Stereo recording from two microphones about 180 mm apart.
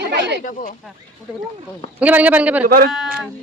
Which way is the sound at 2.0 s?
10° right (ahead or behind).